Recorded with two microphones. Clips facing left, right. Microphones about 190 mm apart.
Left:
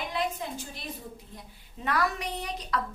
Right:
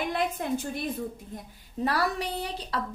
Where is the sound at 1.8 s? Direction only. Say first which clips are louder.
Right 2 dB; 35° right (ahead or behind).